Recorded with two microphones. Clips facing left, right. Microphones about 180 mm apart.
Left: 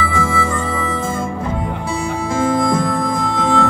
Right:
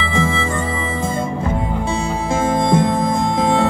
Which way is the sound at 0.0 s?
25° right (ahead or behind).